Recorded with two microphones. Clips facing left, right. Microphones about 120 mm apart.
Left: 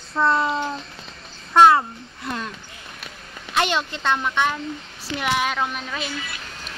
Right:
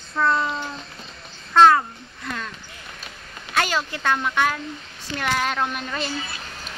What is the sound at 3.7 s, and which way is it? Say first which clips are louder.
Speech: left 1 dB; 5° right (ahead or behind).